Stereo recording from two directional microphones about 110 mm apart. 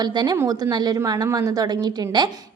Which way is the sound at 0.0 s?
40° right (ahead or behind).